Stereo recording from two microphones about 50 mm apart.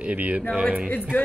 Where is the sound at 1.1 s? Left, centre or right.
Left.